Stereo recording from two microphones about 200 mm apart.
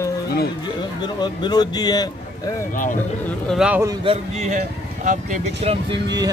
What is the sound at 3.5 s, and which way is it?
Speech, 5° right (ahead or behind).